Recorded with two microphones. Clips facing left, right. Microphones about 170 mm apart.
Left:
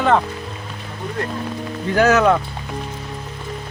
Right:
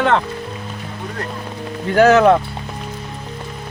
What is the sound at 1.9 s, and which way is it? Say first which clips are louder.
Speech: right 4 dB; 30° right (ahead or behind).